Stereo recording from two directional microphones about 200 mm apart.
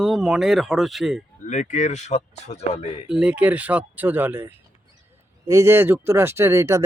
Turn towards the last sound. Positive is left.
turn(degrees=-15)  # may be behind; listen again after turning